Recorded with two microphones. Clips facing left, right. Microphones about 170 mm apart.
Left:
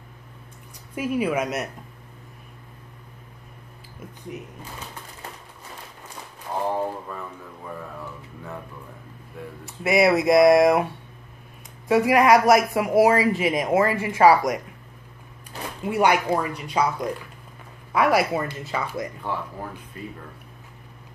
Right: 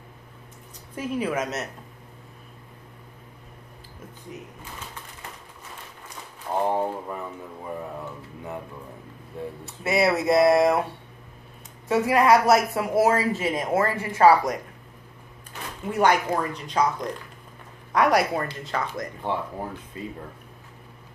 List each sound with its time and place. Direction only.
0.9 s a woman's voice: 10° left (ahead or behind)
6.7 s speech: 20° right (ahead or behind)
9.8 s a woman's voice: 15° left (ahead or behind)
11.9 s a woman's voice: 15° left (ahead or behind)
15.8 s a woman's voice: 10° left (ahead or behind)
19.2 s speech: 25° right (ahead or behind)